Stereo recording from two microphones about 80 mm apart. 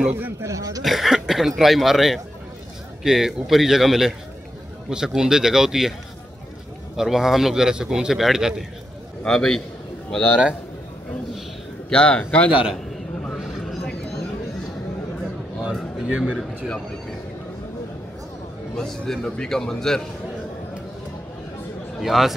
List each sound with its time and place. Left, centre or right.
0.1 s speech: right
0.8 s speech: centre
7.0 s speech: centre
9.2 s a man's voice: centre
11.9 s a man's voice: centre
16.1 s speech: centre
16.3 s a man's voice: centre
18.8 s a man's voice: centre
22.0 s speech: centre